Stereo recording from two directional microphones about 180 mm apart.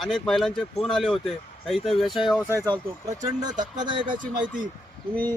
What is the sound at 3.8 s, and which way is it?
Speech, 25° right (ahead or behind).